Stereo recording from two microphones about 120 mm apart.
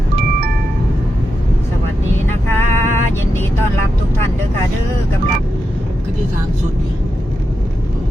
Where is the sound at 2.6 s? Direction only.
90° right.